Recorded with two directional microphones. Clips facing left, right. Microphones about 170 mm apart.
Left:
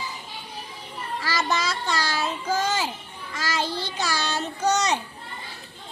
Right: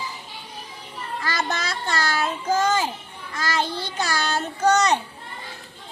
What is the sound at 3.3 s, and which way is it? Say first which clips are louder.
Child singing: right 2 dB; 50° right (ahead or behind).